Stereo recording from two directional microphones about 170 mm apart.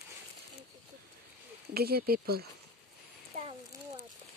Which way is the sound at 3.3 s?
45° right (ahead or behind).